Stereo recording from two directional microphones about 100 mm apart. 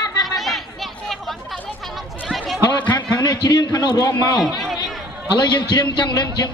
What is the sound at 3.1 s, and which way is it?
A man's voice, 45° left (ahead or behind).